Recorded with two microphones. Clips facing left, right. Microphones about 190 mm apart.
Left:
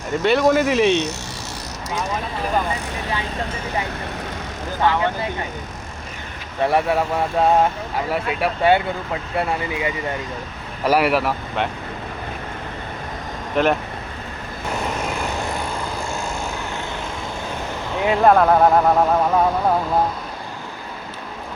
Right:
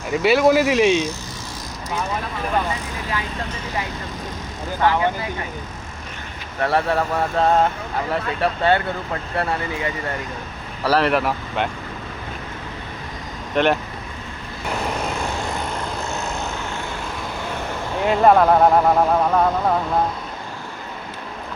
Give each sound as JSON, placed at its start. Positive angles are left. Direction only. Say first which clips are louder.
{"t": 0.1, "sound": "speech", "louder": "right 1 dB", "side_deg": -5}
{"t": 6.6, "sound": "speech", "louder": "left 1 dB", "side_deg": 15}
{"t": 13.6, "sound": "speech", "louder": "even", "side_deg": 0}
{"t": 18.0, "sound": "speech", "louder": "even", "side_deg": 0}